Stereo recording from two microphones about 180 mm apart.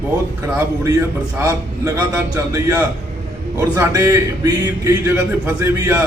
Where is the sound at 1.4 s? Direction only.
15° right (ahead or behind).